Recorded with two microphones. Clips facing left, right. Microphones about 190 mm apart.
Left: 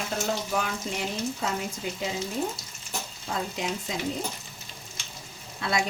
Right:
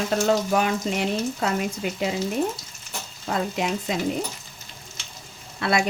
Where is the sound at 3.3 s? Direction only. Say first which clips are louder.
Right 6 dB; 70° right (ahead or behind).